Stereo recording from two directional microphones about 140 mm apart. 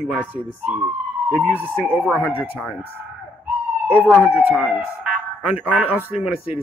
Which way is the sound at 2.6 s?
10° right (ahead or behind).